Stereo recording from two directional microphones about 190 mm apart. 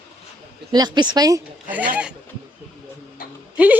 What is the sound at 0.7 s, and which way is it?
Speech, 20° right (ahead or behind).